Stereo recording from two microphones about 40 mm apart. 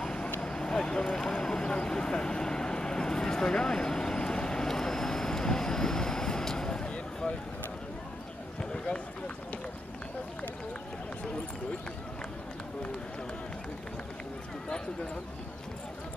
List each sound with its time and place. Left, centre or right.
0.0 s vehicle: left
8.7 s run: left